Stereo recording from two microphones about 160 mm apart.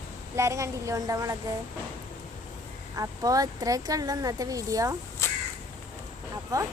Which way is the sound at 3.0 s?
20° right (ahead or behind).